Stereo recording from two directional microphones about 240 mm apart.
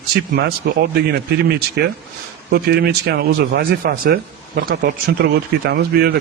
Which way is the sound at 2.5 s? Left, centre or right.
Right.